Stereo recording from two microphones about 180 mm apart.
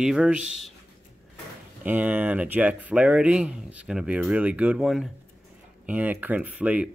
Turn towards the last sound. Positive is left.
turn(degrees=-5)  # may be behind; listen again after turning